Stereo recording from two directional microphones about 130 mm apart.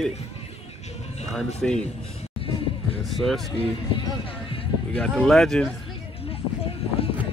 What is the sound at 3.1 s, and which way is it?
Speech, centre (ahead or behind).